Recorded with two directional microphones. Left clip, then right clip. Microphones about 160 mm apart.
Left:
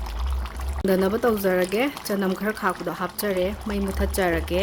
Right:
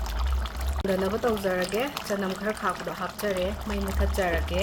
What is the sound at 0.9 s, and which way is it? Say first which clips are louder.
Speech: left 5 dB; 65° left (ahead or behind).